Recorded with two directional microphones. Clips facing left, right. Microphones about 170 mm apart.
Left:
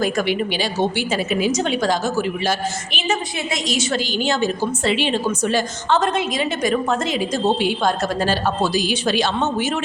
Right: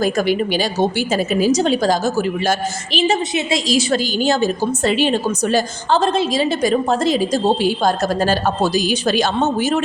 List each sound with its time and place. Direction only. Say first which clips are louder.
0.0 s a woman's voice: right 3 dB; 40° right (ahead or behind)